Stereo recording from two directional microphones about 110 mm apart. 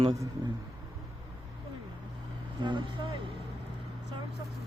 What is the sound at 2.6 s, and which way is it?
Vehicle, 45° right (ahead or behind).